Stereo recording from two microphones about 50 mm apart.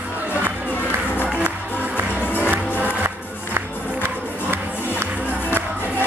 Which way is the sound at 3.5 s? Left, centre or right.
Right.